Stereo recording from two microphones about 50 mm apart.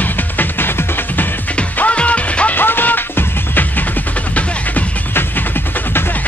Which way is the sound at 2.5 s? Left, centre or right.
Left.